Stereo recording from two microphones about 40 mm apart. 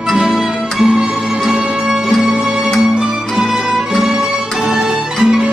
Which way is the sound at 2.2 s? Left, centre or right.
Centre.